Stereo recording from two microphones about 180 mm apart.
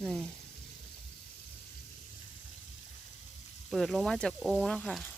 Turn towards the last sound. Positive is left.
turn(degrees=5)  # may be behind; listen again after turning